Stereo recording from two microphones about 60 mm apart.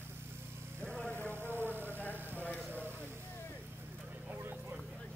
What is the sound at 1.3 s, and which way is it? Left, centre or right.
Vehicle, right.